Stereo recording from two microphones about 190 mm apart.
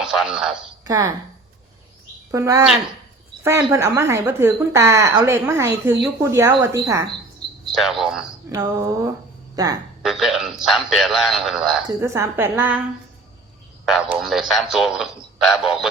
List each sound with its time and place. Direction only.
0.0 s a woman's voice: 5° right (ahead or behind)
0.9 s a woman's voice: 20° right (ahead or behind)
2.3 s speech: 20° right (ahead or behind)
7.7 s a man's voice: centre (ahead or behind)
8.4 s speech: 15° right (ahead or behind)
10.0 s a man's voice: centre (ahead or behind)
11.9 s speech: 15° right (ahead or behind)
13.8 s a man's voice: centre (ahead or behind)